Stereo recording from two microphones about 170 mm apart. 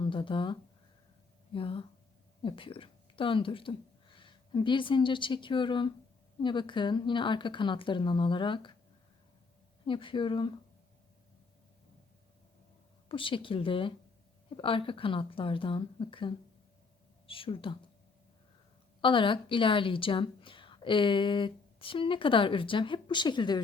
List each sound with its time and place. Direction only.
0.0 s a woman's voice: 30° left (ahead or behind)
9.8 s a woman's voice: 30° left (ahead or behind)
13.1 s speech: 30° left (ahead or behind)
19.0 s a woman's voice: 30° left (ahead or behind)